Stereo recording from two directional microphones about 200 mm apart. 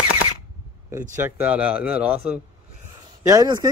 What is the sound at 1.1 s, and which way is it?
Speech, 10° right (ahead or behind).